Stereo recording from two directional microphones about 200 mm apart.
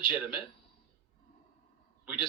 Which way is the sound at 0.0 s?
25° left (ahead or behind).